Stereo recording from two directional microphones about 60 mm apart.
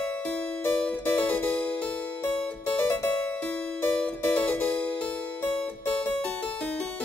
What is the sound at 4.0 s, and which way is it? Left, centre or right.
Music, centre.